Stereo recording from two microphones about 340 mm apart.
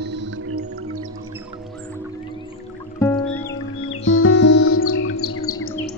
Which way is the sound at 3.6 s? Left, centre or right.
Left.